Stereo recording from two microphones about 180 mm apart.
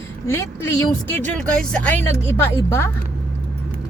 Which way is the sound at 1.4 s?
5° left (ahead or behind).